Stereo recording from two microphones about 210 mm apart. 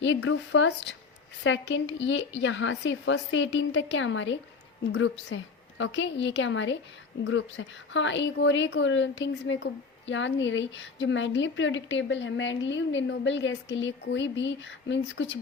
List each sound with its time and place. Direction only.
0.0 s a woman's voice: 65° left (ahead or behind)